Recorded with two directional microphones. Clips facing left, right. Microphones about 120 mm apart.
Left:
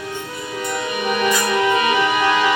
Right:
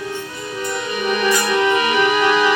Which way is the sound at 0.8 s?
20° left (ahead or behind).